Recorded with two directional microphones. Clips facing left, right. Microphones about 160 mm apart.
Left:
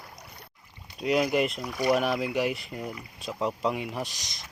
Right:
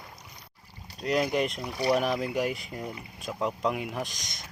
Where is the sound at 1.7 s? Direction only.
30° right (ahead or behind).